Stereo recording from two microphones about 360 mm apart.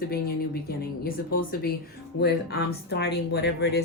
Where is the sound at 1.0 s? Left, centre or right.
Left.